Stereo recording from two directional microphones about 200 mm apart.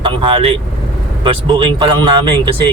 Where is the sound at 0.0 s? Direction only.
25° right (ahead or behind).